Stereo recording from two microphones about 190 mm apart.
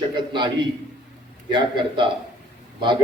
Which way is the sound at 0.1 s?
25° right (ahead or behind).